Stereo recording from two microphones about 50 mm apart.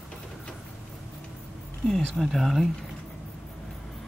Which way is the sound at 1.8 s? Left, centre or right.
Centre.